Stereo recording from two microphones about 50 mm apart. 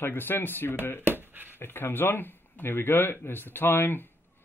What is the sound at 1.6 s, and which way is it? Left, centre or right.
Speech, left.